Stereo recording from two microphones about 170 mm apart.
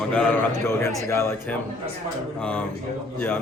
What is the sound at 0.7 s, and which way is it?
A man's voice, 15° left (ahead or behind).